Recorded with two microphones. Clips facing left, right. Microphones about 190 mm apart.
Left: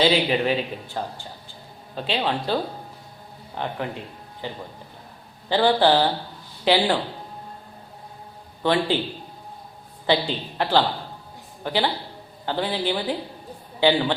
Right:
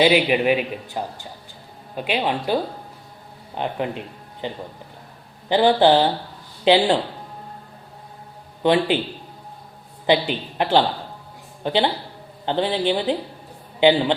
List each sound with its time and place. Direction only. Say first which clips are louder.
0.0 s a woman's voice: right 3 dB; 15° right (ahead or behind)
8.6 s speech: right 3 dB; 15° right (ahead or behind)
10.1 s a woman's voice: right 3 dB; 20° right (ahead or behind)